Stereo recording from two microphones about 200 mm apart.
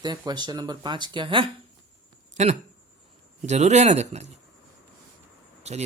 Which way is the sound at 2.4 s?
35° right (ahead or behind).